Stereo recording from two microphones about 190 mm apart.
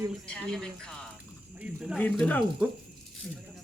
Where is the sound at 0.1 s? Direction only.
5° left (ahead or behind).